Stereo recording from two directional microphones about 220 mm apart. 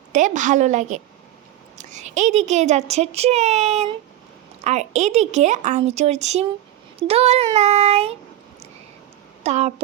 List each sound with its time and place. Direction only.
0.1 s a child's voice: 35° right (ahead or behind)
7.1 s child singing: 25° right (ahead or behind)
9.4 s speech: 30° right (ahead or behind)